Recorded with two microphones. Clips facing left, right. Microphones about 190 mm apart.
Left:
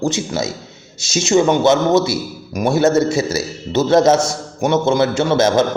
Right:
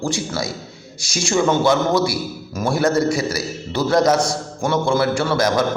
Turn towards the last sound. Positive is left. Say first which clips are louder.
# left 4 dB
turn(degrees=25)  # may be behind; listen again after turning